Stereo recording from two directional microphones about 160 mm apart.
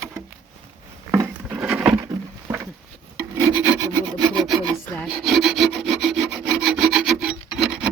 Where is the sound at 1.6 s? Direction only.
5° right (ahead or behind).